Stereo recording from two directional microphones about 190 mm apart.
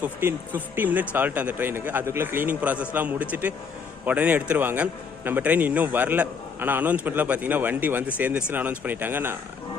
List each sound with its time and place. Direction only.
0.0 s a man's voice: 10° right (ahead or behind)